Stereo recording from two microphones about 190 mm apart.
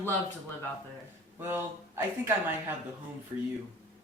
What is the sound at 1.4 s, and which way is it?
Speech, 10° right (ahead or behind).